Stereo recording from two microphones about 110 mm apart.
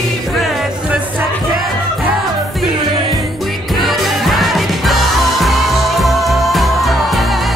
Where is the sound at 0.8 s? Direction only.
10° right (ahead or behind).